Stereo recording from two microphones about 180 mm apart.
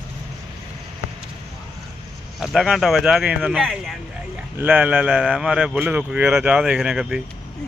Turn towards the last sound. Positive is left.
turn(degrees=-5)  # may be behind; listen again after turning